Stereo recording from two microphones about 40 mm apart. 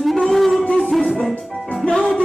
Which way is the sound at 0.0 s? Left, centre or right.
Centre.